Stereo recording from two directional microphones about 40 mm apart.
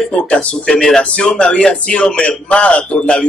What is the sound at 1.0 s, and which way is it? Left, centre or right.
A man's voice, left.